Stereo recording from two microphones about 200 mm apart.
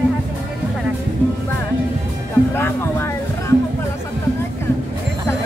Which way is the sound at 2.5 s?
10° left (ahead or behind).